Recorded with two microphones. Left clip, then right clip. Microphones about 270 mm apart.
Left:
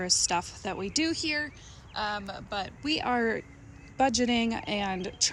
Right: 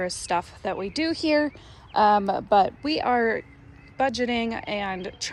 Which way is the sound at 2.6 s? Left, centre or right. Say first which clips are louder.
Right 6 dB; centre.